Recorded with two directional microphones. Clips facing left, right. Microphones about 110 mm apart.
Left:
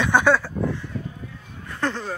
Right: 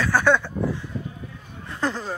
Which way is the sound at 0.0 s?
20° left (ahead or behind).